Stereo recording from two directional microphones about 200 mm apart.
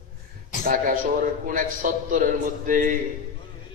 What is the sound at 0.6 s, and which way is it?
A man's voice, 45° right (ahead or behind).